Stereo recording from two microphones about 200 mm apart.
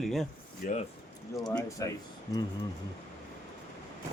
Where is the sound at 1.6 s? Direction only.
15° left (ahead or behind).